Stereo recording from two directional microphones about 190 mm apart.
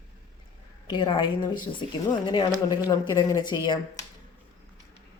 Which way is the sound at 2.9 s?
20° left (ahead or behind).